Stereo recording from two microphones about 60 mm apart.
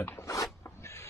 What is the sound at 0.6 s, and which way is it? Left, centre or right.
Rub, left.